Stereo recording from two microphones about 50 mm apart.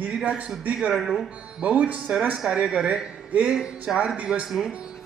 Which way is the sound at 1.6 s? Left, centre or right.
Right.